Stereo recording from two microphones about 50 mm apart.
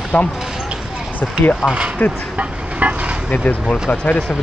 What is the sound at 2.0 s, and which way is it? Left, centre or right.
Speech, left.